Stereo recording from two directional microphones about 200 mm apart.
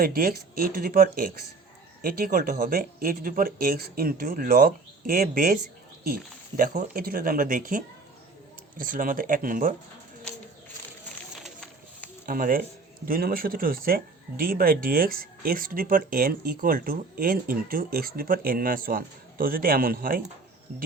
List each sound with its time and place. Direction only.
0.0 s speech: 45° right (ahead or behind)
6.6 s speech: 45° right (ahead or behind)
11.4 s run: 5° left (ahead or behind)
12.2 s speech: 45° right (ahead or behind)